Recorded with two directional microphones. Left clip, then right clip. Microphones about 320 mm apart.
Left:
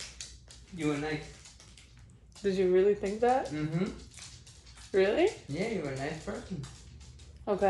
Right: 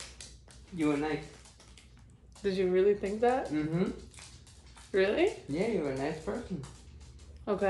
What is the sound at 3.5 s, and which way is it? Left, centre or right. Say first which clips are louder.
Speech: right 3 dB; centre.